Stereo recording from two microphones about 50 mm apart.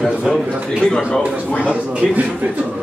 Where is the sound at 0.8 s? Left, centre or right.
Centre.